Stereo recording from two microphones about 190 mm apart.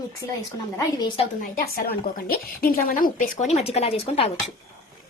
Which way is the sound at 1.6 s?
50° left (ahead or behind).